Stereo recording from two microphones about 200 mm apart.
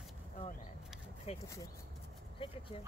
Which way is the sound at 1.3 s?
30° left (ahead or behind).